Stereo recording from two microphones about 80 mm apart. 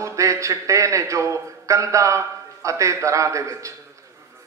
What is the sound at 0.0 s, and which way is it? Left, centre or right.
A man's voice, right.